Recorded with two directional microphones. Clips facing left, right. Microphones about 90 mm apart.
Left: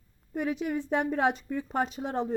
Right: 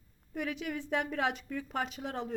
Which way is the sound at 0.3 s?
30° left (ahead or behind).